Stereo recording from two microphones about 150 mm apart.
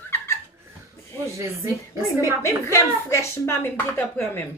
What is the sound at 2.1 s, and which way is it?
Speech, 15° right (ahead or behind).